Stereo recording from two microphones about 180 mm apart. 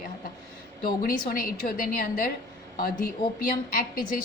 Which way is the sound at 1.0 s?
55° left (ahead or behind).